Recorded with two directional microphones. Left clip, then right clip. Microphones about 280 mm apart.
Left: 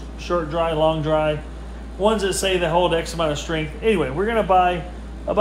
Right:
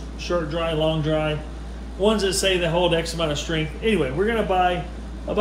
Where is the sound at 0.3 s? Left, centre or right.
Left.